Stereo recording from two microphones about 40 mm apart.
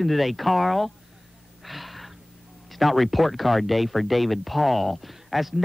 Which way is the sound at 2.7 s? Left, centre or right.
Centre.